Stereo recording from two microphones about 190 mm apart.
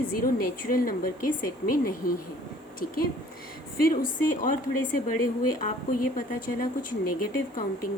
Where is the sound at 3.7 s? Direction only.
50° left (ahead or behind).